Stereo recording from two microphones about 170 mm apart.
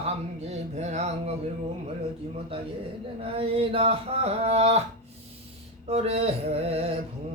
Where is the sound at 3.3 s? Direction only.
35° right (ahead or behind).